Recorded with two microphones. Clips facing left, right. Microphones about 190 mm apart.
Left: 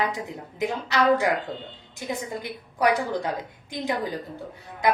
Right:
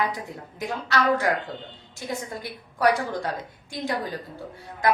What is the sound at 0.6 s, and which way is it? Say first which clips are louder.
A woman's voice: left 2 dB; 20° left (ahead or behind).